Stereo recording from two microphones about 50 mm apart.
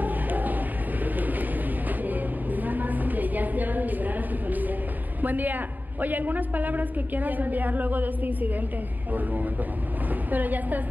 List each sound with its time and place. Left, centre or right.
0.0 s music: right
1.9 s a sound: right
5.2 s a woman's voice: right